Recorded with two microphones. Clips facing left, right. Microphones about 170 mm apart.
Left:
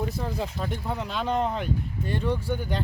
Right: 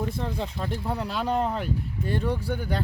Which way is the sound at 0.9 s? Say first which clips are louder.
Right 1 dB; 5° right (ahead or behind).